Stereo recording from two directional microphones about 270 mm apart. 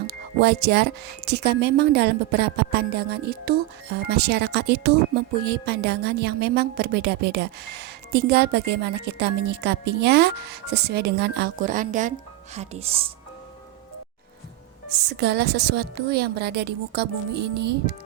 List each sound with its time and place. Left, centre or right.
0.1 s speech: right
15.2 s speech: right